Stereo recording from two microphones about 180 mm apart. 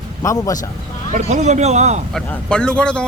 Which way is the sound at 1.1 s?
40° right (ahead or behind).